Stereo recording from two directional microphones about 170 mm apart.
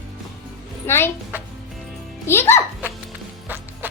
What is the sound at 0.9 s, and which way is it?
Speech, 15° left (ahead or behind).